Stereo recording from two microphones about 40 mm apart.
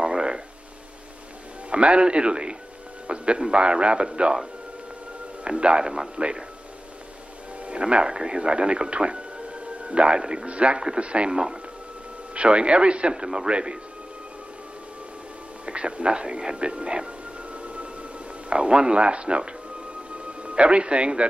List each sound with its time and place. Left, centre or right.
0.0 s a sound: centre
1.7 s speech: right
5.6 s speech: right
7.6 s speech: right
12.4 s speech: right
15.6 s speech: right
18.5 s a man's voice: right